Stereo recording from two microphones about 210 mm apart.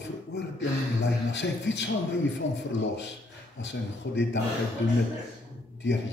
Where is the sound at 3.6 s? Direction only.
60° left (ahead or behind).